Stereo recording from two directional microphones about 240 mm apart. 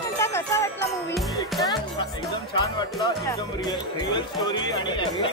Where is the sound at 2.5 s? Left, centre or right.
Centre.